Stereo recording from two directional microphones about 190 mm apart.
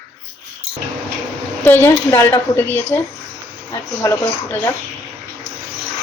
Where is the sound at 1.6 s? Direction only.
10° left (ahead or behind).